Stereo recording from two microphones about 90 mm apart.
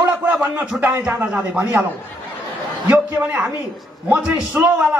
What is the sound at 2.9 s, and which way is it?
A man's voice, 20° right (ahead or behind).